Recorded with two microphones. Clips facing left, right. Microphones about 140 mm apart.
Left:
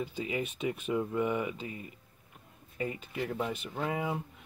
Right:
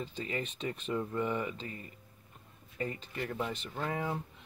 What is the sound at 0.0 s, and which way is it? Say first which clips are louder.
Speech: left 3 dB; 10° left (ahead or behind).